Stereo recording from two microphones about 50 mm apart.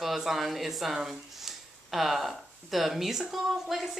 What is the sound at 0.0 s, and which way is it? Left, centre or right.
Speech, centre.